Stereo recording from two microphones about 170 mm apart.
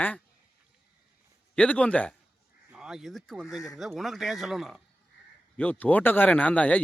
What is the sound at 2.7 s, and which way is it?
Speech, 5° right (ahead or behind).